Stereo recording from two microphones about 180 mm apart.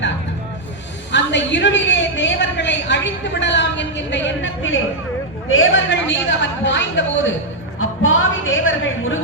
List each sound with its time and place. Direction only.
1.1 s a man's voice: 80° left
5.5 s a woman's voice: 90° left